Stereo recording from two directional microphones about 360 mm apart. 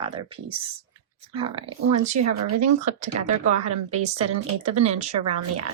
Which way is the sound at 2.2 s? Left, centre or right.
Right.